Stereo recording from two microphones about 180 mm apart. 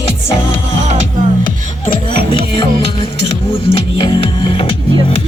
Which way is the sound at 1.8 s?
30° left (ahead or behind).